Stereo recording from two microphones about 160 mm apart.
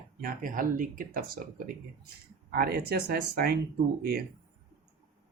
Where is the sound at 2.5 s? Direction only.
75° right (ahead or behind).